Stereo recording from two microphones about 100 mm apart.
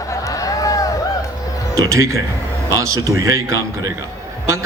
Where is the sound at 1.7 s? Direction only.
30° right (ahead or behind).